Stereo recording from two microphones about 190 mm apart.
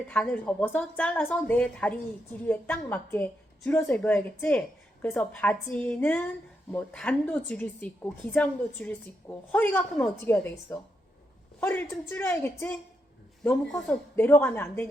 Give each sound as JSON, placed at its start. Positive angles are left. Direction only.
{"t": 0.1, "sound": "a woman's voice", "side_deg": 5}